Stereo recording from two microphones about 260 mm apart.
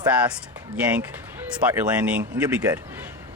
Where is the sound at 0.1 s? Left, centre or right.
Centre.